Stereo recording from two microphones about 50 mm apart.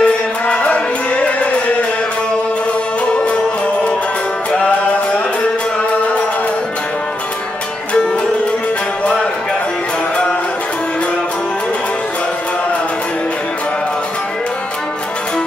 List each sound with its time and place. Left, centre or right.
0.0 s music: left
4.5 s music: left